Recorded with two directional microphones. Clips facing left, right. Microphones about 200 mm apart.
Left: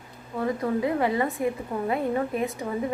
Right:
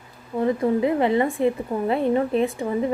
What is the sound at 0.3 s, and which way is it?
A woman's voice, 25° right (ahead or behind).